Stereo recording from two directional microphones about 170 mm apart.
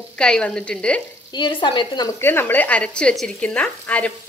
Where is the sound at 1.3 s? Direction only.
25° left (ahead or behind).